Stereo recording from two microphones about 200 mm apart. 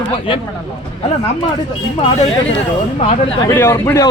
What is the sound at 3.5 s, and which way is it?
Speech, 10° left (ahead or behind).